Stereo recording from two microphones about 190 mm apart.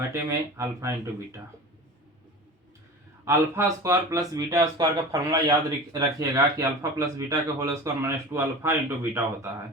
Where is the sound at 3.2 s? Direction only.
15° right (ahead or behind).